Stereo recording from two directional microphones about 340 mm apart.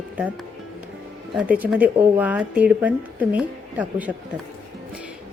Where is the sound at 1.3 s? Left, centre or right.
Centre.